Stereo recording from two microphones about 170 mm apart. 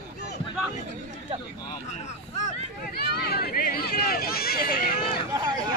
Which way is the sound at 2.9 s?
65° left (ahead or behind).